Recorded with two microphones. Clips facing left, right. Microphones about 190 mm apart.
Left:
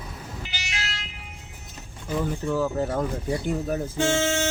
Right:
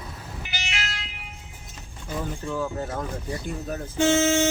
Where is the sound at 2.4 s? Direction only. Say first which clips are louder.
Left 5 dB; 10° left (ahead or behind).